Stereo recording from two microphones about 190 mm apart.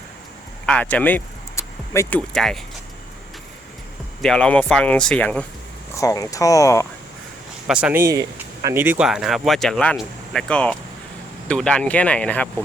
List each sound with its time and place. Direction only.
0.6 s speech: 5° left (ahead or behind)
4.2 s speech: 5° left (ahead or behind)
5.9 s speech: 15° left (ahead or behind)
7.7 s speech: 5° right (ahead or behind)